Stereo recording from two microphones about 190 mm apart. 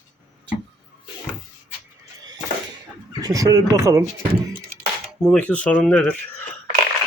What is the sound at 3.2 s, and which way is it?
Speech, 20° right (ahead or behind).